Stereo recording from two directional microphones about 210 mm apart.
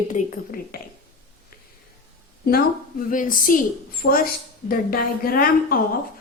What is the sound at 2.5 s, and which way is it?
A woman's voice, 40° left (ahead or behind).